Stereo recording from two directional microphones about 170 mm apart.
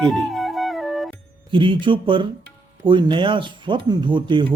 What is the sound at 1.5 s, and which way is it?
Speech, 30° right (ahead or behind).